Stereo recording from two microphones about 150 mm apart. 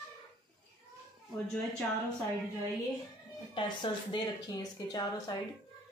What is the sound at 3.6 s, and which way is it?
A woman's voice, 30° left (ahead or behind).